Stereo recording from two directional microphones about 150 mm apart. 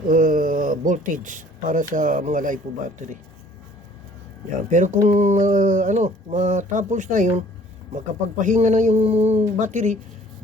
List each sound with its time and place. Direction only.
0.1 s speech: 60° right (ahead or behind)
4.7 s speech: 55° right (ahead or behind)